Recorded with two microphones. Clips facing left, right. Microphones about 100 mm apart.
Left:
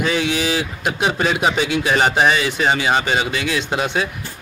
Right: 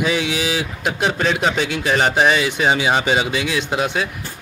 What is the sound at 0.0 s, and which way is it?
Speech, 5° right (ahead or behind).